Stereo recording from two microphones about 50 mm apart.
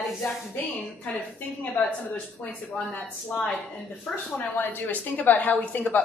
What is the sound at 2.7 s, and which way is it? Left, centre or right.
A woman's voice, left.